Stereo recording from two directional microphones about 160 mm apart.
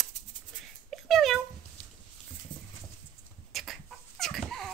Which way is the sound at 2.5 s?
30° left (ahead or behind).